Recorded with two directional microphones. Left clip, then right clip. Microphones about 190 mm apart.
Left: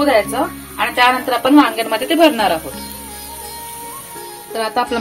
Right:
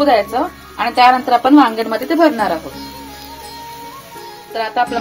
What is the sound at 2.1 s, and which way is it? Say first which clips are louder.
Speech: left 1 dB; 20° right (ahead or behind).